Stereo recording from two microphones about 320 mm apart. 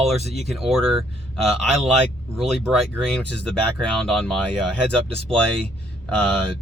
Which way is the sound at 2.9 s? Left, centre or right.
Centre.